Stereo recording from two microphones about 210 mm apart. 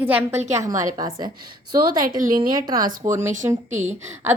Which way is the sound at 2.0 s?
40° right (ahead or behind).